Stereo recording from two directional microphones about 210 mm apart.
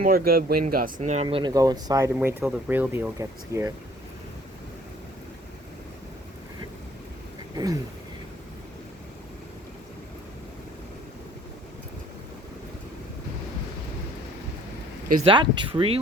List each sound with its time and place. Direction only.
0.0 s speech: 45° right (ahead or behind); by 3.7 s 15° right (ahead or behind)
7.5 s a sound: 15° right (ahead or behind)
15.2 s speech: 25° right (ahead or behind)